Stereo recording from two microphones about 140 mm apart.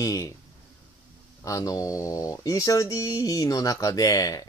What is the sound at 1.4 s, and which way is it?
Speech, 25° left (ahead or behind).